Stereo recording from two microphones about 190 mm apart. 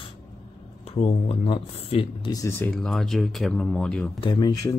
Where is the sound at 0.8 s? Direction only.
30° left (ahead or behind).